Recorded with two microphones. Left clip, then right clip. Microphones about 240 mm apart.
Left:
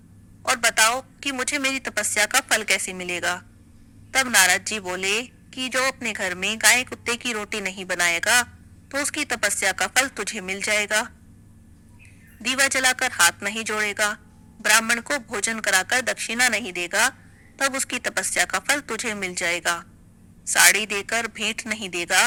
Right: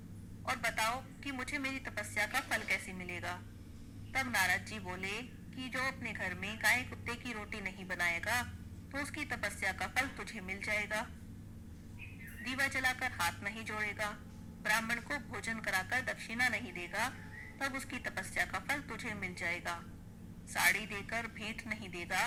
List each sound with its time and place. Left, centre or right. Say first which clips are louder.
0.4 s a woman's voice: left 15 dB; left
12.4 s a woman's voice: left 14 dB; left